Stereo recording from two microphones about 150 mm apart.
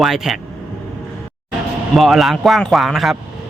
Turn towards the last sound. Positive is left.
turn(degrees=0)  # may be behind; listen again after turning